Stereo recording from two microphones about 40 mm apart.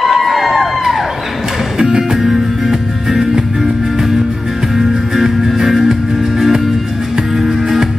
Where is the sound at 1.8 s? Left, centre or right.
Centre.